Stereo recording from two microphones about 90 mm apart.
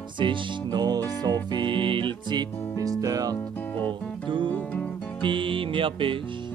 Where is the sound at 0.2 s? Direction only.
60° right (ahead or behind).